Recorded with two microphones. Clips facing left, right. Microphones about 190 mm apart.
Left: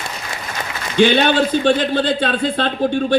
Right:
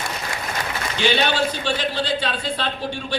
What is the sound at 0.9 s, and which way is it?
A man's voice, 55° left (ahead or behind).